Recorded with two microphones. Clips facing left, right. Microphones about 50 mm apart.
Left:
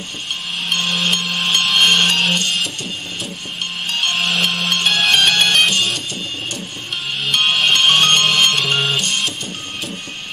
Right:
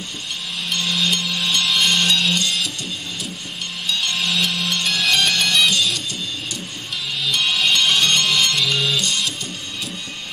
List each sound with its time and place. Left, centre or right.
0.7 s music: left
3.8 s music: left
7.2 s music: left